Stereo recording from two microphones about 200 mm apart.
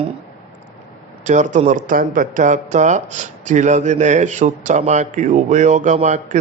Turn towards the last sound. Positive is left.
turn(degrees=-35)  # may be behind; listen again after turning